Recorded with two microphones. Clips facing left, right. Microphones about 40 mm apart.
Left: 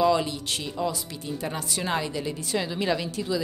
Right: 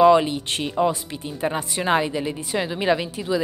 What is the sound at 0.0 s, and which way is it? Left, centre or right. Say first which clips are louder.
A woman's voice: right 8 dB; right.